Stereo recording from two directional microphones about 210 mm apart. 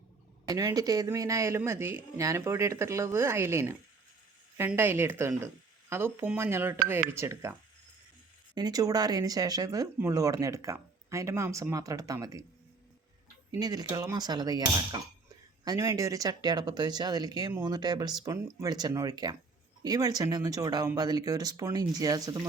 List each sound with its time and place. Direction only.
0.4 s speech: 15° right (ahead or behind)
8.5 s speech: 20° right (ahead or behind)
13.5 s speech: 20° right (ahead or behind)